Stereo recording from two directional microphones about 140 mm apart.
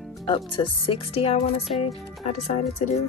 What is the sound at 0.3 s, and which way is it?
Speech, 35° left (ahead or behind).